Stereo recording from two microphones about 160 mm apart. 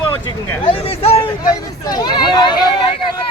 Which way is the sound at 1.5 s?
25° left (ahead or behind).